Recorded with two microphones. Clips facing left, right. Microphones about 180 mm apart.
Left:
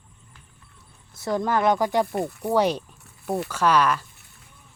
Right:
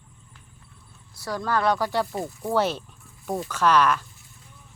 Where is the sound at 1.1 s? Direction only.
25° left (ahead or behind).